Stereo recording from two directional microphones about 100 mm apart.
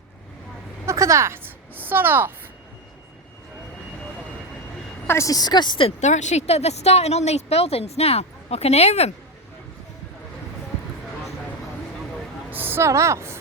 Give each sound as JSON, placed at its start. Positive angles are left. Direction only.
{"t": 0.9, "sound": "speech", "side_deg": -30}
{"t": 5.0, "sound": "a woman's voice", "side_deg": 30}
{"t": 6.3, "sound": "a woman's voice", "side_deg": 90}
{"t": 12.5, "sound": "speech", "side_deg": -20}